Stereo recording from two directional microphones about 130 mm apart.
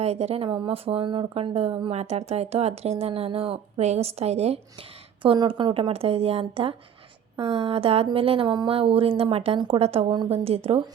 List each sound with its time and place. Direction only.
0.0 s speech: 55° right (ahead or behind); by 5.9 s 35° right (ahead or behind)
5.9 s speech: 50° right (ahead or behind)